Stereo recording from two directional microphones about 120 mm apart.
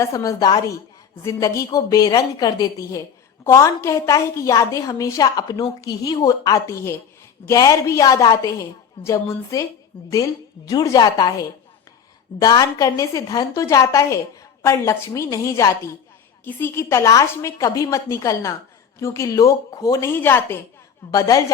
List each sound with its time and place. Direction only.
0.0 s a woman's voice: 30° left (ahead or behind)
21.1 s a woman's voice: 30° left (ahead or behind)